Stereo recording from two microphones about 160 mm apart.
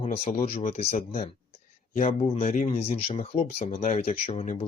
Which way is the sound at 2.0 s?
40° left (ahead or behind).